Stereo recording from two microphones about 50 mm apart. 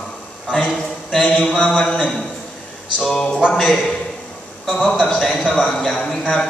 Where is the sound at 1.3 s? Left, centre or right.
Left.